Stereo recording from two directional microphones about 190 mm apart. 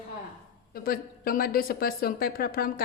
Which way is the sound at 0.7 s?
50° left (ahead or behind).